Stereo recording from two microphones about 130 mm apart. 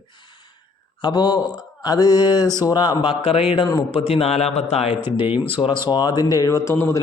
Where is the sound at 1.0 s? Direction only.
35° left (ahead or behind); by 4.9 s 55° left (ahead or behind).